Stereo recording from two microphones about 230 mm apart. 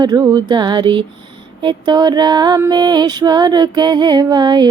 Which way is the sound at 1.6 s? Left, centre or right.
Centre.